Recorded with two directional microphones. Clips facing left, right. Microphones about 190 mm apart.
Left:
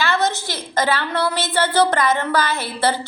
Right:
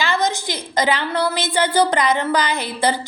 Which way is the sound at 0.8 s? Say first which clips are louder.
Right 1 dB; 15° right (ahead or behind).